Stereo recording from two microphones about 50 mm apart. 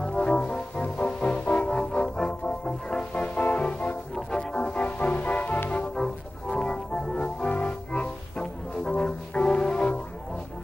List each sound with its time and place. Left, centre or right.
0.0 s music: centre
4.1 s music: centre; by 5.6 s left
5.9 s organ: centre
8.8 s music: centre